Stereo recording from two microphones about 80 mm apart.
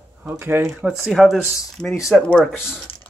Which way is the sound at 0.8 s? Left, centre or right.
Centre.